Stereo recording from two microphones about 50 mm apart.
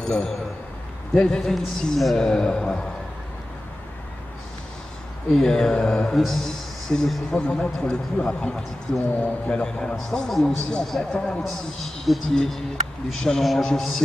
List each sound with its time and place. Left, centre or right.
0.0 s a man's voice: centre
5.3 s a man's voice: centre